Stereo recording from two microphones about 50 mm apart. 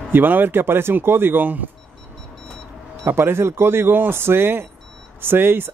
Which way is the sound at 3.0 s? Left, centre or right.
Right.